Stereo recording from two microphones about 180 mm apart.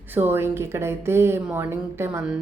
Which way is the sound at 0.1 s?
10° right (ahead or behind).